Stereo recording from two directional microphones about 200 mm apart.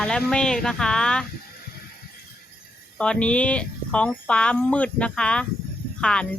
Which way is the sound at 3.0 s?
5° left (ahead or behind).